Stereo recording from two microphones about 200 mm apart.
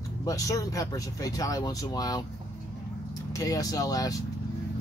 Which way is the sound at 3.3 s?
15° left (ahead or behind).